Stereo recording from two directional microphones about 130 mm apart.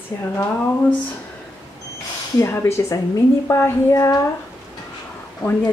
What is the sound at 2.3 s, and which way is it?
A woman's voice, 20° left (ahead or behind).